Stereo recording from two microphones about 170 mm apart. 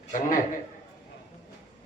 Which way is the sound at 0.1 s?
50° left (ahead or behind).